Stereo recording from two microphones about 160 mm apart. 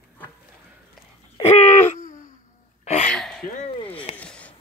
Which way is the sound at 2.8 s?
45° left (ahead or behind).